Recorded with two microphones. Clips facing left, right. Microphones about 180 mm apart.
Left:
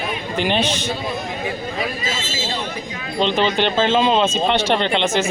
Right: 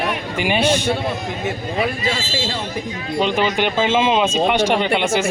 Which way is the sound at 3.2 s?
10° right (ahead or behind).